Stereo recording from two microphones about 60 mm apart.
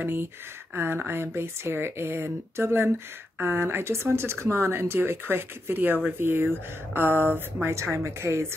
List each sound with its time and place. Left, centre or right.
0.0 s speech: right
7.6 s speech: right